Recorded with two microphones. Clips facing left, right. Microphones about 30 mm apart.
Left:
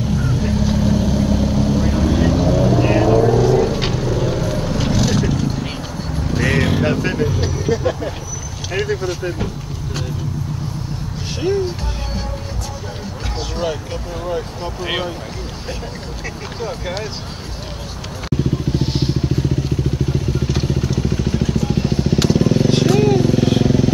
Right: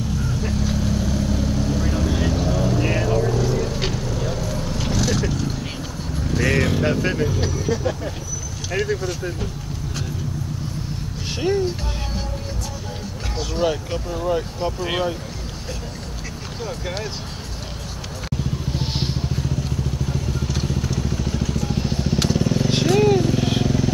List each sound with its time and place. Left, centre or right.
0.4 s vehicle: centre
8.7 s a sound: centre
11.4 s music: centre
13.6 s vehicle: centre
14.8 s speech: centre
16.6 s speech: centre
18.7 s vehicle: centre
19.3 s vehicle: centre
22.7 s vehicle: centre